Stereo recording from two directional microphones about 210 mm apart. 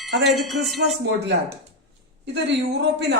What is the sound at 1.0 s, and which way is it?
Speech, 55° right (ahead or behind).